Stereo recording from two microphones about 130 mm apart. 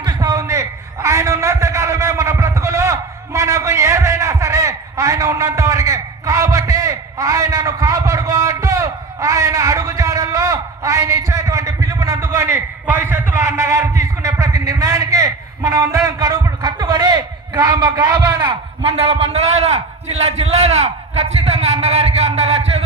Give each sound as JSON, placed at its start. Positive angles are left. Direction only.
{"t": 0.0, "sound": "a man's voice", "side_deg": -30}
{"t": 18.8, "sound": "a man's voice", "side_deg": -50}